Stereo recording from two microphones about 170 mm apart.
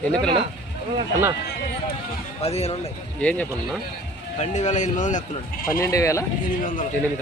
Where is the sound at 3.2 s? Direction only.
5° left (ahead or behind).